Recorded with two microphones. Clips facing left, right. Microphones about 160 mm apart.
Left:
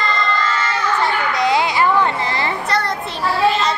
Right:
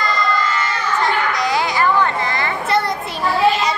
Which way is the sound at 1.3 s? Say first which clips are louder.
Left 2 dB; 20° left (ahead or behind).